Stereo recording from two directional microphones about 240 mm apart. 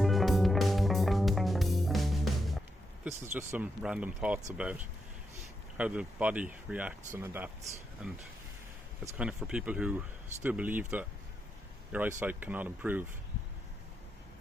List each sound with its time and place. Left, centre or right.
0.0 s music: centre
5.7 s speech: centre